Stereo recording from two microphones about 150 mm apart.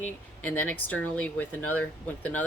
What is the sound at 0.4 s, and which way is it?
Speech, 10° left (ahead or behind).